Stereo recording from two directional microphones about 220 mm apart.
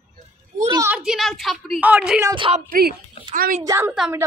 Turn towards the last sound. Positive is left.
turn(degrees=0)  # may be behind; listen again after turning